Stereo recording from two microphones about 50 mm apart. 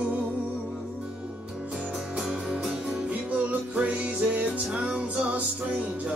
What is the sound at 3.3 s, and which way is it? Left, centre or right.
Music, right.